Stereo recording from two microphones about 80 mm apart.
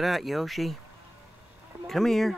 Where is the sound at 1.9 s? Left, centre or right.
Centre.